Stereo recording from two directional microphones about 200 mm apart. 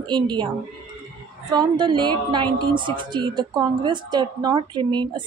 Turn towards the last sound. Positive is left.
turn(degrees=-20)  # may be behind; listen again after turning